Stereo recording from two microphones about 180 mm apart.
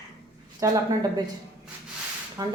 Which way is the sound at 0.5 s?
20° right (ahead or behind).